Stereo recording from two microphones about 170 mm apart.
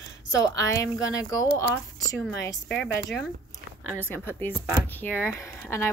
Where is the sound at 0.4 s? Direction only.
20° left (ahead or behind).